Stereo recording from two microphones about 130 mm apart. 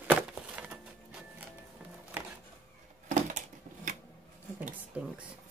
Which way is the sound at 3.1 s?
75° right (ahead or behind).